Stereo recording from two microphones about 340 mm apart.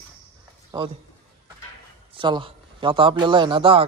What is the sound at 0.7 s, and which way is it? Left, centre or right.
Speech, centre.